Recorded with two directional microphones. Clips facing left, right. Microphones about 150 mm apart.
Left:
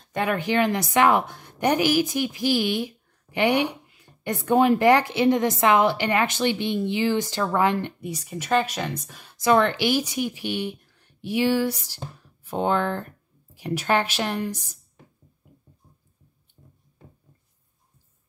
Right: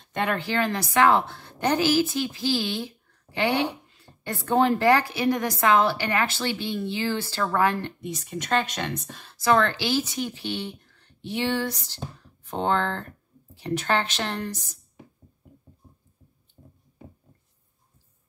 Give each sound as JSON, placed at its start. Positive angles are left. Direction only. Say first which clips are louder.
{"t": 0.1, "sound": "a woman's voice", "louder": "left 3 dB", "side_deg": 10}
{"t": 8.0, "sound": "a woman's voice", "louder": "even", "side_deg": 10}